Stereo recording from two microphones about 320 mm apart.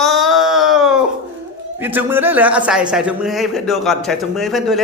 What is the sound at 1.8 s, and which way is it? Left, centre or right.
Speech, centre.